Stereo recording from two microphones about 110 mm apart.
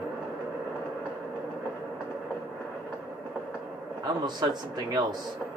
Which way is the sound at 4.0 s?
35° right (ahead or behind).